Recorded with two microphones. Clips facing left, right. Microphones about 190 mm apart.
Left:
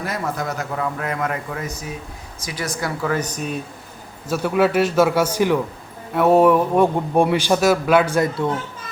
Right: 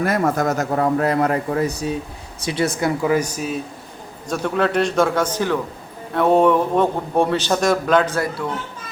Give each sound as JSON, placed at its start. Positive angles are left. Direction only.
{"t": 0.0, "sound": "a man's voice", "side_deg": -50}
{"t": 3.0, "sound": "speech", "side_deg": -10}
{"t": 4.3, "sound": "a man's voice", "side_deg": 5}